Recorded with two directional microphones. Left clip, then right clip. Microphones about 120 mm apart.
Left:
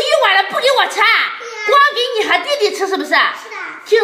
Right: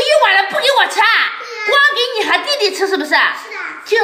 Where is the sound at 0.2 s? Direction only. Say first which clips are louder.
Even; 10° left (ahead or behind).